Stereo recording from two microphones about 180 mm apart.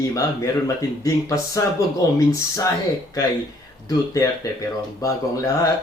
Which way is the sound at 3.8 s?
15° left (ahead or behind).